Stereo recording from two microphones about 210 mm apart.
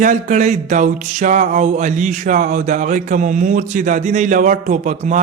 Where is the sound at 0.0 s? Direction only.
35° right (ahead or behind).